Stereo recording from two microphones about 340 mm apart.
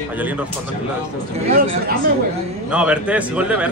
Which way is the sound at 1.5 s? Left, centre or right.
Right.